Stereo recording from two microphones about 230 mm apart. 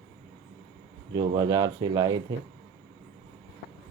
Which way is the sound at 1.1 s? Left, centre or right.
Centre.